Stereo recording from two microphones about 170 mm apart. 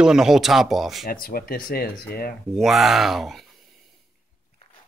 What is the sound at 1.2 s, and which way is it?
Speech, 60° left (ahead or behind).